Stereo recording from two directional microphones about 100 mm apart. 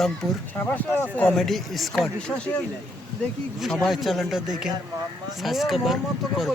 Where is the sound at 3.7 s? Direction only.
Centre (ahead or behind).